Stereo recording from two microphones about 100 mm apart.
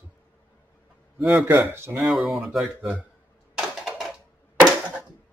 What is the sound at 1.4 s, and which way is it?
Speech, 25° right (ahead or behind).